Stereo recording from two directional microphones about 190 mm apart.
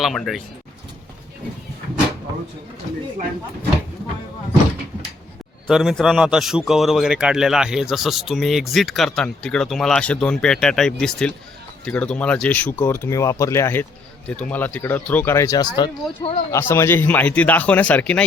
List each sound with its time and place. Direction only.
0.0 s a man's voice: centre (ahead or behind)
5.6 s a man's voice: centre (ahead or behind)